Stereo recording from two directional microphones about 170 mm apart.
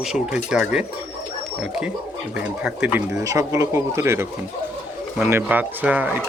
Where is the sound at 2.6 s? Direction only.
5° right (ahead or behind).